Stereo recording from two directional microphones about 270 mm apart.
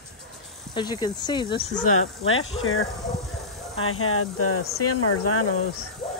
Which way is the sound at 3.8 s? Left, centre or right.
Left.